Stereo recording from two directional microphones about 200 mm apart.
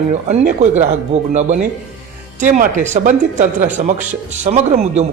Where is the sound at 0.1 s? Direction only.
35° right (ahead or behind).